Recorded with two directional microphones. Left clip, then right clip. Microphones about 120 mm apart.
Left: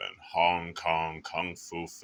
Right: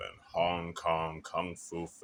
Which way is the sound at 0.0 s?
15° right (ahead or behind).